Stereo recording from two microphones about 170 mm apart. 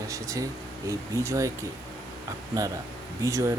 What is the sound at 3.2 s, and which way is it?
Speech, 15° right (ahead or behind).